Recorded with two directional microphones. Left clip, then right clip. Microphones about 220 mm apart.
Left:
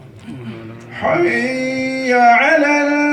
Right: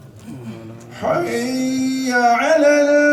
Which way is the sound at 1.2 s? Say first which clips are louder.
Left 5 dB; 60° right (ahead or behind).